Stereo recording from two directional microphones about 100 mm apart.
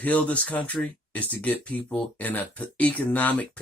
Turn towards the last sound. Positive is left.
turn(degrees=15)  # may be behind; listen again after turning